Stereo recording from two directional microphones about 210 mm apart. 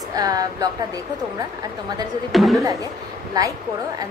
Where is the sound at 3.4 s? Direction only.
20° right (ahead or behind).